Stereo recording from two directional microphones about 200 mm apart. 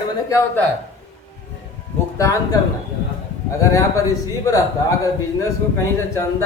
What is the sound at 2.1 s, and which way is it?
Speech, 15° left (ahead or behind).